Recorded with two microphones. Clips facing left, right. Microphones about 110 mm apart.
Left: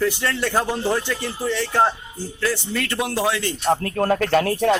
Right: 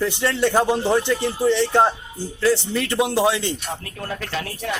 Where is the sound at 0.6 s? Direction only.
20° right (ahead or behind).